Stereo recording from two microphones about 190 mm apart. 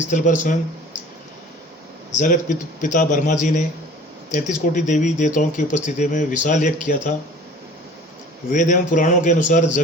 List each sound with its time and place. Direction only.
0.1 s speech: 40° left (ahead or behind)
2.1 s speech: 40° left (ahead or behind)
8.4 s speech: 40° left (ahead or behind)